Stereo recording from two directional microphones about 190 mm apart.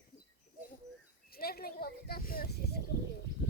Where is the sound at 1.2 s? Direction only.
55° left (ahead or behind).